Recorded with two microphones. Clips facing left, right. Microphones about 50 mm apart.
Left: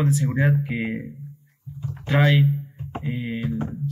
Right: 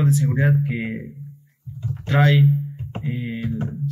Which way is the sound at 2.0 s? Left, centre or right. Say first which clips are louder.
Right 2 dB; left.